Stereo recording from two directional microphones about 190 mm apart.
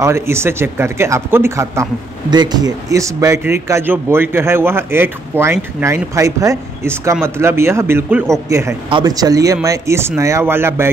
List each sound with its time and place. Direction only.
0.0 s speech: 15° right (ahead or behind)